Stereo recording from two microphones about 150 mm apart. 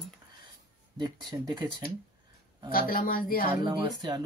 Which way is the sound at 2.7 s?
75° left (ahead or behind).